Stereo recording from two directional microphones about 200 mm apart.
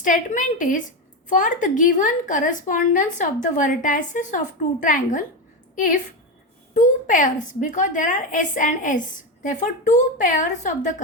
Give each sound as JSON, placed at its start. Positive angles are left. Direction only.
{"t": 0.0, "sound": "a woman's voice", "side_deg": 40}